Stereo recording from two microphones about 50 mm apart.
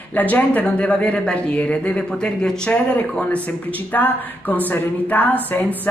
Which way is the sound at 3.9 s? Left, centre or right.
Left.